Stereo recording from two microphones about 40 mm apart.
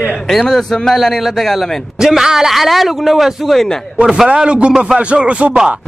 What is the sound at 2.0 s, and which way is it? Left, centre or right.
A man's voice, centre.